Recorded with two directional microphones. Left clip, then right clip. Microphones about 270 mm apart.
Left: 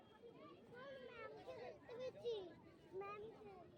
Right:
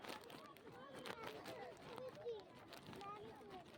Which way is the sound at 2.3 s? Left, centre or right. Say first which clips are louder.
Left 3 dB; left.